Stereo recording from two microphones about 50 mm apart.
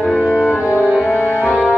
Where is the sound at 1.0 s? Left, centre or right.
Left.